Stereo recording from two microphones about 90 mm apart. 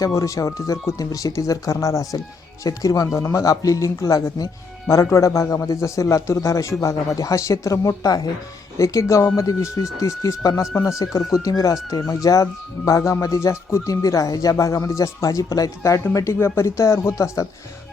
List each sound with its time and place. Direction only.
0.1 s speech: 35° left (ahead or behind)